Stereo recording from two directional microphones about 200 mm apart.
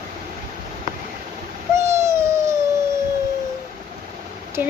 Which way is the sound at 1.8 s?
15° right (ahead or behind).